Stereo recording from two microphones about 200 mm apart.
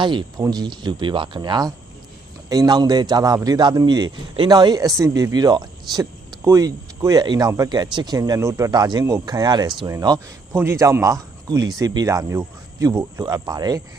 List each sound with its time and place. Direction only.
0.0 s speech: 25° right (ahead or behind)